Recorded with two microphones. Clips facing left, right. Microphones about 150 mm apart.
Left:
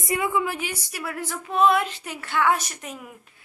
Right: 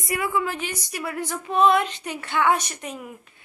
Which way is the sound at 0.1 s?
20° left (ahead or behind).